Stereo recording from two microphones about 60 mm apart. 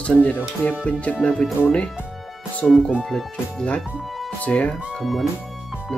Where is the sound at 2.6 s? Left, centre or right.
Centre.